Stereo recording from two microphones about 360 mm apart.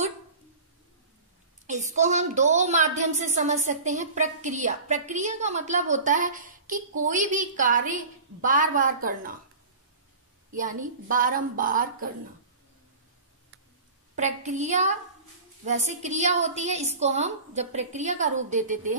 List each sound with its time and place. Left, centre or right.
1.7 s a woman's voice: centre
10.5 s a woman's voice: right
14.1 s a woman's voice: centre